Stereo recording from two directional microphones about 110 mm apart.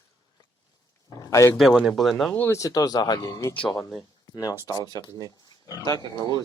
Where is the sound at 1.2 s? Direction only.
30° left (ahead or behind).